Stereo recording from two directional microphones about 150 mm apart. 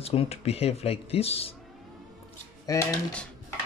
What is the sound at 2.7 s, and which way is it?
Mantra, 25° left (ahead or behind).